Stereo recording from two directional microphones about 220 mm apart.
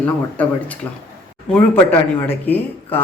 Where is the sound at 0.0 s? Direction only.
5° left (ahead or behind).